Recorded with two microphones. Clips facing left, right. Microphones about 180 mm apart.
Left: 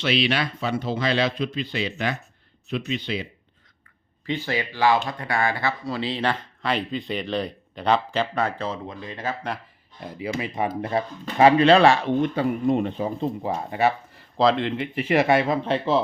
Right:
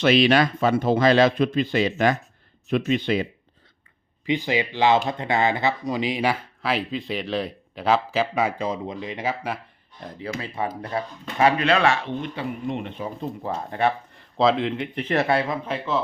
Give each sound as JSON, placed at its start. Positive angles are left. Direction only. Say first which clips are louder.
{"t": 0.0, "sound": "speech", "louder": "right 6 dB", "side_deg": -45}
{"t": 4.3, "sound": "speech", "louder": "right 3 dB", "side_deg": -15}
{"t": 10.0, "sound": "speech", "louder": "left 3 dB", "side_deg": 10}
{"t": 12.0, "sound": "speech", "louder": "left 7 dB", "side_deg": 40}
{"t": 13.4, "sound": "speech", "louder": "even", "side_deg": 10}
{"t": 15.6, "sound": "speech", "louder": "left 4 dB", "side_deg": 30}